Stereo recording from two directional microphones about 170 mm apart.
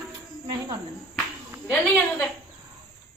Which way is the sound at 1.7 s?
10° left (ahead or behind).